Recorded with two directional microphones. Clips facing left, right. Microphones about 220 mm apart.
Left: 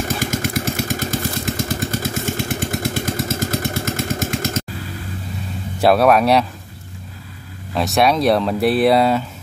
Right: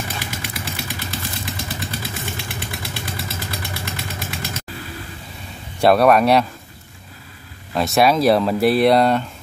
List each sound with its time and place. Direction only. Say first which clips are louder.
0.0 s motorcycle: left 8 dB; 45° left (ahead or behind)
5.8 s speech: even; centre (ahead or behind)
7.7 s speech: even; centre (ahead or behind)